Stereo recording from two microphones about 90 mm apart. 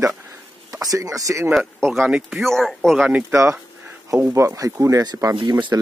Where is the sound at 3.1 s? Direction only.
20° right (ahead or behind); by 5.0 s 35° right (ahead or behind).